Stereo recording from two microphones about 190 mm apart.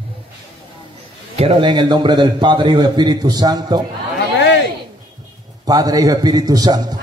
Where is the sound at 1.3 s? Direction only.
30° right (ahead or behind).